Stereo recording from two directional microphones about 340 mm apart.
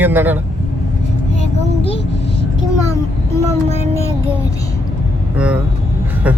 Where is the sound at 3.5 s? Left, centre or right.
Centre.